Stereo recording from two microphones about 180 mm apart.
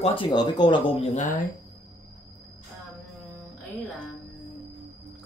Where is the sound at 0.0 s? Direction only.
30° left (ahead or behind).